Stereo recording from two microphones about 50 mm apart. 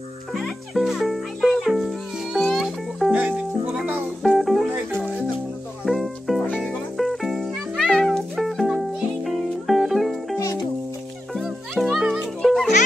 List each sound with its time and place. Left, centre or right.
0.3 s music: centre
3.1 s music: right
4.2 s music: centre
4.6 s music: right
5.9 s music: centre
11.8 s music: centre